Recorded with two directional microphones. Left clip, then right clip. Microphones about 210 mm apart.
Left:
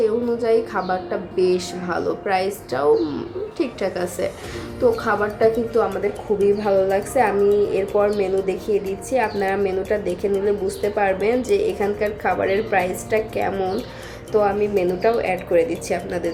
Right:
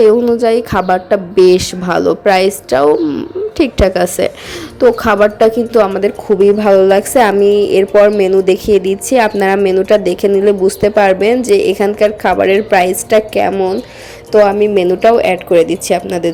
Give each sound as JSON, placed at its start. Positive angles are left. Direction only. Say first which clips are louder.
{"t": 0.0, "sound": "a woman's voice", "louder": "right 12 dB", "side_deg": -40}
{"t": 14.4, "sound": "a woman's voice", "louder": "right 9 dB", "side_deg": -40}